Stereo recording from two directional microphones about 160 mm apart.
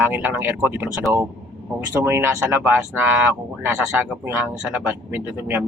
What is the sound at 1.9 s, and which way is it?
Speech, 15° right (ahead or behind).